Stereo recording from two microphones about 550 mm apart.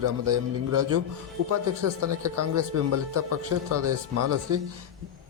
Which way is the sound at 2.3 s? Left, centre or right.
Right.